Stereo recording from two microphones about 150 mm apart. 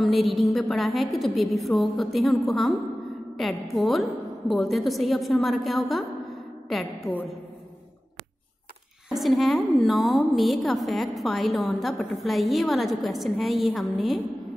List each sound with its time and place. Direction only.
0.0 s a woman's voice: centre (ahead or behind)
7.1 s a woman's voice: centre (ahead or behind)
9.1 s a woman's voice: centre (ahead or behind)